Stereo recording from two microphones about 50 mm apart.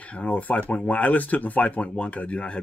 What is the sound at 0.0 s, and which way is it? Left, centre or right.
Speech, left.